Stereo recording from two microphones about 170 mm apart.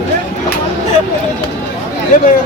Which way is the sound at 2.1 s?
50° left (ahead or behind).